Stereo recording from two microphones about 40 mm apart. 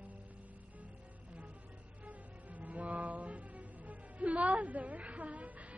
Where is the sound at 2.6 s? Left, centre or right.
Right.